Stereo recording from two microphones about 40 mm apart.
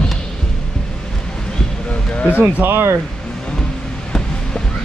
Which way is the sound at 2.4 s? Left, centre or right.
Right.